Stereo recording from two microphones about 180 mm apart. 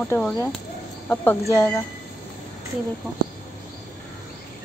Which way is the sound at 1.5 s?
10° left (ahead or behind).